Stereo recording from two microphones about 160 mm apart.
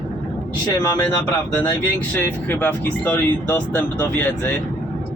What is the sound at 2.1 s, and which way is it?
Speech, 10° left (ahead or behind).